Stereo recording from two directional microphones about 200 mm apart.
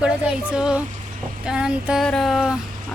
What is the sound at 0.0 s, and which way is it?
Speech, 5° right (ahead or behind).